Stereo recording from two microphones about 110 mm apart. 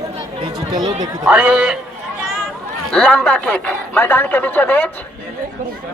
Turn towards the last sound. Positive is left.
turn(degrees=15)  # may be behind; listen again after turning